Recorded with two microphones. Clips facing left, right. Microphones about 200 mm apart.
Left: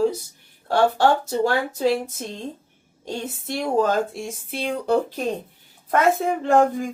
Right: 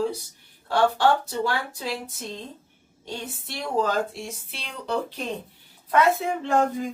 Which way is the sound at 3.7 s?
45° left (ahead or behind).